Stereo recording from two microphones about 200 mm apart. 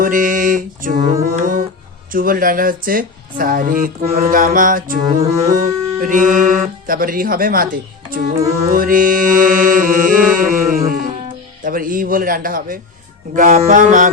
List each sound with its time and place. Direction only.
0.0 s speech: 40° right (ahead or behind)
2.1 s speech: 45° right (ahead or behind)
5.0 s music: 15° right (ahead or behind)
5.5 s music: 45° right (ahead or behind)
6.8 s speech: 45° right (ahead or behind)
10.3 s music: 45° right (ahead or behind)
11.6 s speech: 45° right (ahead or behind)
13.3 s music: 40° right (ahead or behind)